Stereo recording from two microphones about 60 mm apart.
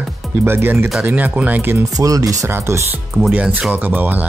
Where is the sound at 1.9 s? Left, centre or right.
Right.